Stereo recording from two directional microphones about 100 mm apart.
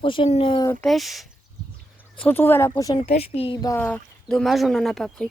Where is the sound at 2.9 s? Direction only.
90° left.